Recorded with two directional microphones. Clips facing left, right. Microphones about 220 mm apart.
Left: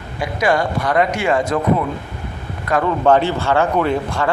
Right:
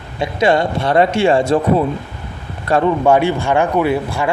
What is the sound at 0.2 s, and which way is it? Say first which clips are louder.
Speech: right 3 dB; 25° right (ahead or behind).